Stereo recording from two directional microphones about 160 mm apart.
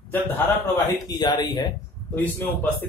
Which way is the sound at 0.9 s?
25° left (ahead or behind).